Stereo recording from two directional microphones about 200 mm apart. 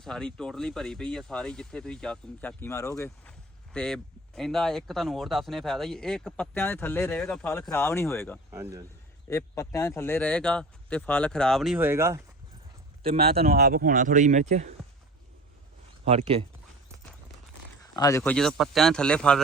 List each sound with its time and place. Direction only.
0.0 s speech: centre (ahead or behind)
3.7 s speech: 5° left (ahead or behind)
8.4 s speech: 15° right (ahead or behind)
9.3 s speech: 15° left (ahead or behind); by 12.2 s 15° right (ahead or behind)
13.0 s speech: 30° right (ahead or behind)
13.4 s speech: 50° right (ahead or behind)
16.0 s speech: 30° right (ahead or behind)
17.9 s speech: 20° left (ahead or behind)
18.2 s speech: 5° left (ahead or behind)